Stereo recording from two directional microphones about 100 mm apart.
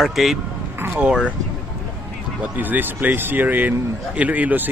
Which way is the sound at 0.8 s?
15° right (ahead or behind).